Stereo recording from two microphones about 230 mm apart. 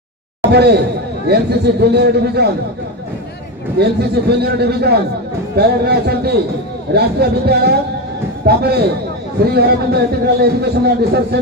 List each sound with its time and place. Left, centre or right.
0.5 s a man's voice: right
3.8 s a man's voice: right